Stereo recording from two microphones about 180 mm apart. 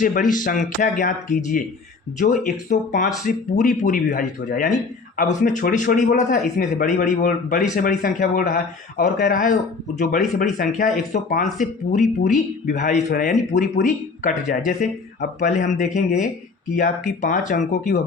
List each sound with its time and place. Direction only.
0.0 s speech: 45° left (ahead or behind)
13.8 s speech: 45° left (ahead or behind)